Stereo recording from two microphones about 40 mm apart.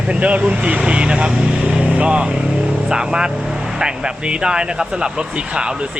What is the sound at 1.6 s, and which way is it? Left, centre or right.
Vehicle, right.